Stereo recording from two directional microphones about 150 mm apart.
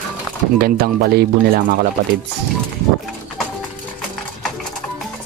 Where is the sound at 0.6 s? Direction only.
90° right.